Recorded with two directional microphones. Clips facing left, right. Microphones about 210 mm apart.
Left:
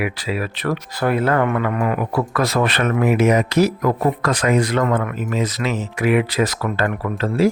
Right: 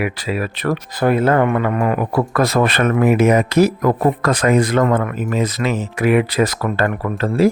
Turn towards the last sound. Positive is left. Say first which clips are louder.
# right 2 dB
turn(degrees=-50)  # may be behind; listen again after turning